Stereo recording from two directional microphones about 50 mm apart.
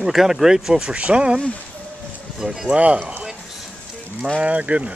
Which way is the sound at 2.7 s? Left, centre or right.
Right.